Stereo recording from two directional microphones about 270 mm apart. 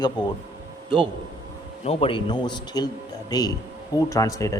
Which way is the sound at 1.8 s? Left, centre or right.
Centre.